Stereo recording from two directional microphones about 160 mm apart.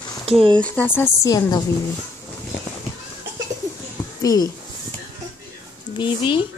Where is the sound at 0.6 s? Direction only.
10° left (ahead or behind).